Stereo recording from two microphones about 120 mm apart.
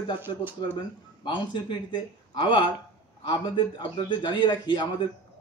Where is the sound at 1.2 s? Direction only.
40° left (ahead or behind).